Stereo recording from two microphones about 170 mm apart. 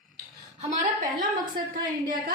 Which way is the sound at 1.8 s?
55° right (ahead or behind).